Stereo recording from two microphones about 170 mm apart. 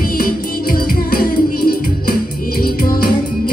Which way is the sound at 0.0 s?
60° left (ahead or behind).